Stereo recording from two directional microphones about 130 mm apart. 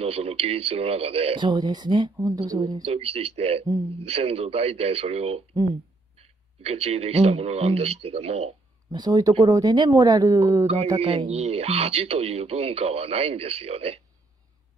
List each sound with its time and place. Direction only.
0.0 s speech: 50° right (ahead or behind); by 2.8 s 30° right (ahead or behind)
2.8 s speech: 50° right (ahead or behind)
8.9 s speech: 30° right (ahead or behind)
11.0 s speech: 45° right (ahead or behind)